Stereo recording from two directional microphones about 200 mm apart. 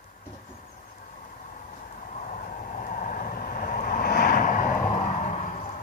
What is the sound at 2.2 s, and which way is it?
Vehicle, 40° left (ahead or behind).